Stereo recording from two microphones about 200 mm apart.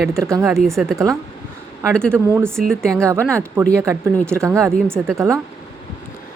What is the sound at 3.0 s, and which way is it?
Speech, 15° right (ahead or behind).